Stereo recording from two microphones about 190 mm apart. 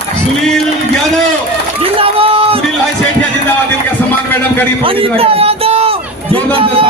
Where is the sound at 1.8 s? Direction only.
30° right (ahead or behind).